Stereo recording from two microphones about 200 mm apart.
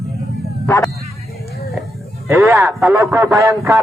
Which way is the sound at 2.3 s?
15° right (ahead or behind).